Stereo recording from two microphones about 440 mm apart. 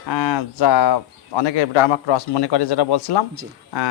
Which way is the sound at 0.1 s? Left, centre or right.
Left.